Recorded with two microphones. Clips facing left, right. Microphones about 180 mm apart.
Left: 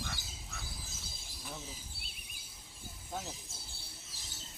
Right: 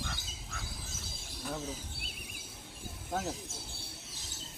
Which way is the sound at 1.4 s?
70° right (ahead or behind).